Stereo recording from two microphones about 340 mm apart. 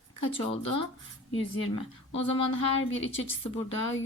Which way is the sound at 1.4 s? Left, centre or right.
Centre.